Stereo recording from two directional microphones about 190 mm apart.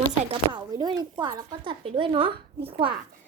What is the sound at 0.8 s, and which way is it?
Speech, 20° right (ahead or behind).